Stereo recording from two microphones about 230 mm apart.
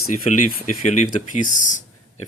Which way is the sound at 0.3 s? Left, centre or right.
Left.